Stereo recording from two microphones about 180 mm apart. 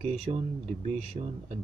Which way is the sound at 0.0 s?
35° right (ahead or behind).